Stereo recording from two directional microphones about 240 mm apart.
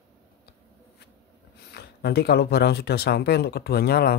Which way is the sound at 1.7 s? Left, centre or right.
Left.